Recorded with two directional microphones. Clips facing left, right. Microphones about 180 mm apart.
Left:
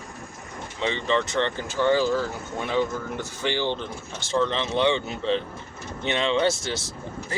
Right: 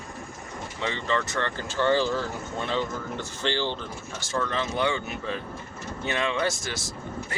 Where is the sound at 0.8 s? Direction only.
20° left (ahead or behind).